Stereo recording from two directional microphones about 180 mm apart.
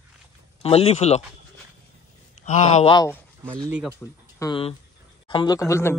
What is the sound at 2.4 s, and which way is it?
Speech, 40° left (ahead or behind).